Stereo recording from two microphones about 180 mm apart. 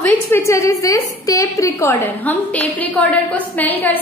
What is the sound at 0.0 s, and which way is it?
A woman's voice, 10° left (ahead or behind).